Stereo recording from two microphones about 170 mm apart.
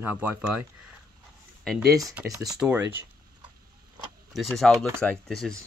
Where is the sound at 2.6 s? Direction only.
10° right (ahead or behind).